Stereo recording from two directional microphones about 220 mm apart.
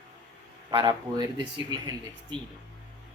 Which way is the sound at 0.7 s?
20° right (ahead or behind).